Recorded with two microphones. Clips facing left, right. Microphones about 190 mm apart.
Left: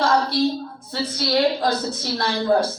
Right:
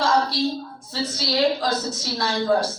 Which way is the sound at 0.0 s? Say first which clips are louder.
Left 2 dB; 55° left (ahead or behind).